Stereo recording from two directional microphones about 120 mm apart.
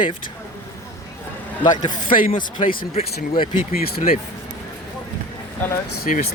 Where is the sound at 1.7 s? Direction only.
90° left.